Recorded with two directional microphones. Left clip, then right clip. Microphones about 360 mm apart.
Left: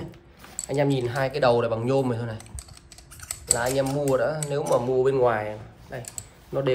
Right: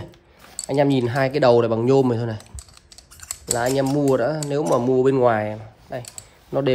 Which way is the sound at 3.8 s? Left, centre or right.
Right.